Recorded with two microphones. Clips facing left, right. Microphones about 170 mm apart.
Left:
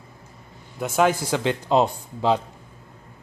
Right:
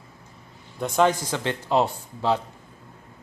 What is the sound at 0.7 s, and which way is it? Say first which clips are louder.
Speech: even; 5° left (ahead or behind).